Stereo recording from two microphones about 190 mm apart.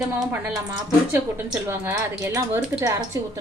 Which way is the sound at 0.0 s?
5° right (ahead or behind).